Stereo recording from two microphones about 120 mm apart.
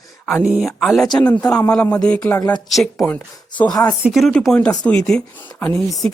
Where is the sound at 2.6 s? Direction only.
Centre (ahead or behind).